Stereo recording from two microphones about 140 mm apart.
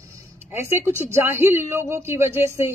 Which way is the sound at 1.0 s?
15° right (ahead or behind).